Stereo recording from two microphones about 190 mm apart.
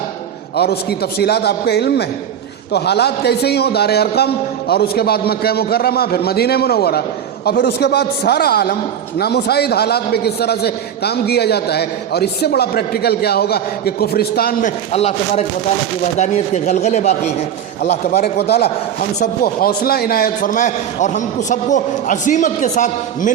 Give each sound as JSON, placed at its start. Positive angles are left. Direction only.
{"t": 0.5, "sound": "a man's voice", "side_deg": 55}
{"t": 14.9, "sound": "speech", "side_deg": 35}
{"t": 17.9, "sound": "a man's voice", "side_deg": 60}